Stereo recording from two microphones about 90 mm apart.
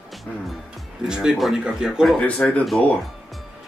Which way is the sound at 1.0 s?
5° right (ahead or behind).